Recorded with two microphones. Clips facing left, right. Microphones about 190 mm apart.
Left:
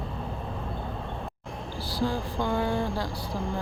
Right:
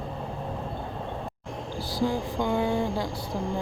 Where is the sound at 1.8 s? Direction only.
20° right (ahead or behind).